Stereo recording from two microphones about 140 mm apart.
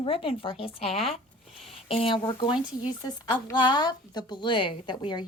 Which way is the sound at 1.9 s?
40° left (ahead or behind).